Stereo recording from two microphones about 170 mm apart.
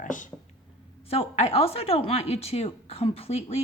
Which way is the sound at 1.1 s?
35° left (ahead or behind).